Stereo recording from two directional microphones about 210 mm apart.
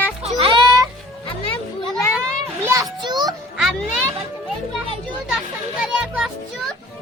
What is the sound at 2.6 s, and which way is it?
Children playing, 15° right (ahead or behind).